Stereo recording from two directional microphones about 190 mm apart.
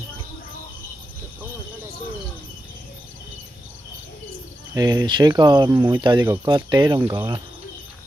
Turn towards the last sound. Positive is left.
turn(degrees=-25)  # may be behind; listen again after turning